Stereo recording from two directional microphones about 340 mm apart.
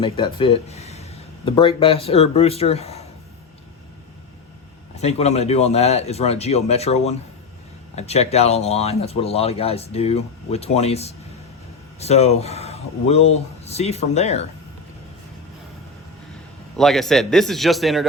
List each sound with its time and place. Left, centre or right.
0.0 s speech: centre
4.9 s speech: centre
16.7 s a man's voice: centre